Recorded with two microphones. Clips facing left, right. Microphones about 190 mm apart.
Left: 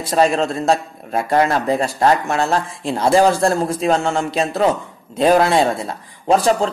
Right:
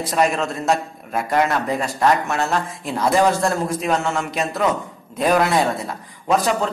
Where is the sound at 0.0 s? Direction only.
30° left (ahead or behind).